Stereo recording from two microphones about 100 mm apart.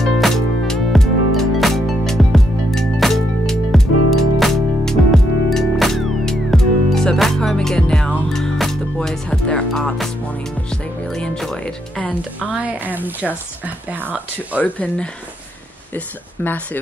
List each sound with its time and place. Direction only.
0.0 s music: 5° left (ahead or behind)
11.1 s music: 5° left (ahead or behind)
12.0 s music: 15° left (ahead or behind)
12.4 s a sound: 15° right (ahead or behind)
14.0 s speech: 15° right (ahead or behind)
14.6 s speech: 15° left (ahead or behind)